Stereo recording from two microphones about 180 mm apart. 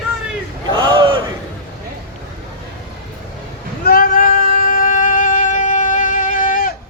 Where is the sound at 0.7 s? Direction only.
25° right (ahead or behind).